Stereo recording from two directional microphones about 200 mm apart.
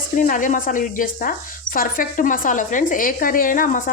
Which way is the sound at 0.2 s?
40° left (ahead or behind).